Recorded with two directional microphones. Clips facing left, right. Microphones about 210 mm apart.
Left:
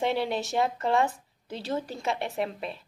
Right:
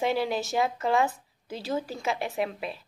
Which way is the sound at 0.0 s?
Centre (ahead or behind).